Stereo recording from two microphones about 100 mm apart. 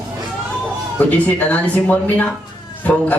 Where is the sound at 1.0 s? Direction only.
15° left (ahead or behind).